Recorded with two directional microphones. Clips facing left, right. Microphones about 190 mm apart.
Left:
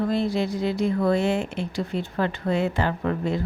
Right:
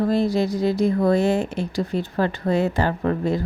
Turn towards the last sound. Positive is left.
turn(degrees=-40)  # may be behind; listen again after turning